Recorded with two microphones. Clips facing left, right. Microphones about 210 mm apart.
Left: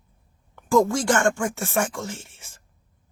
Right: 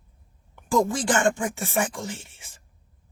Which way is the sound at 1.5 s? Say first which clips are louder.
Left 1 dB; centre (ahead or behind).